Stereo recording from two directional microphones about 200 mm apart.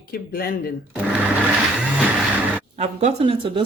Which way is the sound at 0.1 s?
50° left (ahead or behind).